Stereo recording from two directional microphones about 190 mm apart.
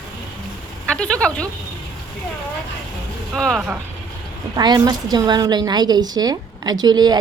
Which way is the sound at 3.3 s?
Centre (ahead or behind).